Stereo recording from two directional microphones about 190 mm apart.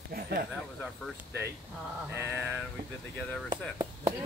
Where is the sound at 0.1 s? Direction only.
55° right (ahead or behind).